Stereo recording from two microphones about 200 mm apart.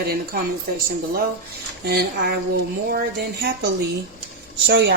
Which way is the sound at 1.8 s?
50° right (ahead or behind).